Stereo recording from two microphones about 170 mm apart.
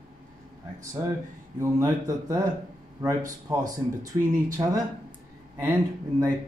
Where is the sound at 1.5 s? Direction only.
20° right (ahead or behind).